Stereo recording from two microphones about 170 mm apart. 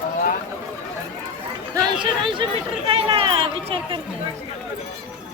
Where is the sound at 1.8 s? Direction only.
30° right (ahead or behind).